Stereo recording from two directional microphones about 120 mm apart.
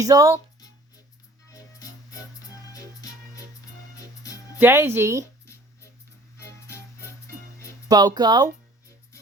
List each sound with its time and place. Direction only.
0.0 s speech: 30° right (ahead or behind)
1.5 s music: 25° left (ahead or behind)
4.5 s speech: 20° right (ahead or behind)
6.3 s music: 25° left (ahead or behind)
7.9 s speech: 35° right (ahead or behind)